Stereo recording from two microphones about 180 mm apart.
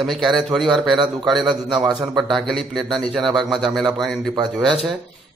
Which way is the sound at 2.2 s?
Centre (ahead or behind).